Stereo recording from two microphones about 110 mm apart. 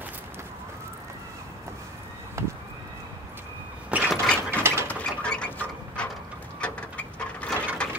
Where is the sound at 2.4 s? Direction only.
25° right (ahead or behind).